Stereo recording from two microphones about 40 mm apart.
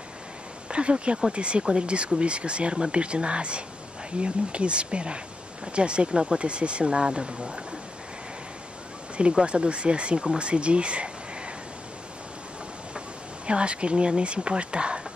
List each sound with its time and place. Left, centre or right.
0.7 s speech: right
9.3 s speech: right
13.5 s speech: right